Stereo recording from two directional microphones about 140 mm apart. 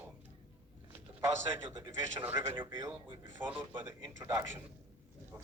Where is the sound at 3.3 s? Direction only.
15° right (ahead or behind).